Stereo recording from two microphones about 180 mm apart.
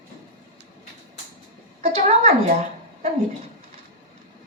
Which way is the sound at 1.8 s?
35° right (ahead or behind).